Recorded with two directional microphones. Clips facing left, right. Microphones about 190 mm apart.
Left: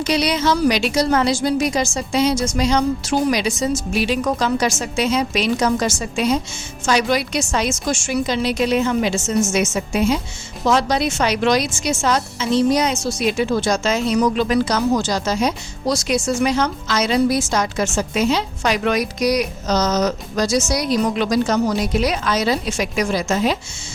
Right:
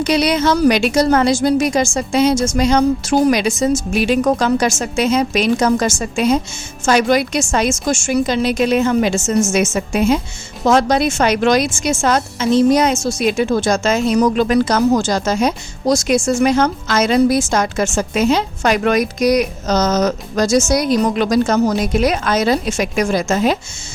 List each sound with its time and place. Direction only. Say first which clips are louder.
0.0 s a woman's voice: right 4 dB; 50° right (ahead or behind)